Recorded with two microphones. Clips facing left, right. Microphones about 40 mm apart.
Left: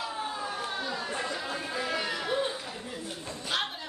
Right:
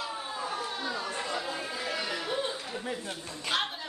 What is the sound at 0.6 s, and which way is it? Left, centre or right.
Chatter, centre.